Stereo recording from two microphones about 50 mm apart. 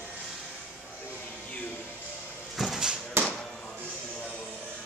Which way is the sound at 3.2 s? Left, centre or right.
Right.